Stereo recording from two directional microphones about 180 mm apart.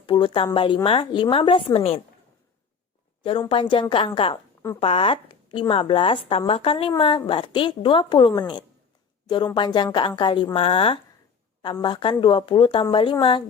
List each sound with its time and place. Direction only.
0.0 s speech: 30° left (ahead or behind)
3.5 s a woman's voice: 30° left (ahead or behind)